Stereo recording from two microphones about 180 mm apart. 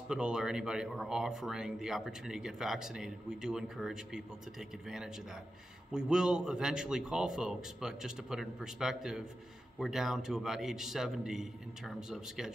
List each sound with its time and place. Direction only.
0.1 s speech: 5° right (ahead or behind)